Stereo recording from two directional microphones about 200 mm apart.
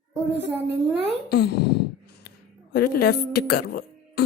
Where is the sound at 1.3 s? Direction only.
55° left (ahead or behind).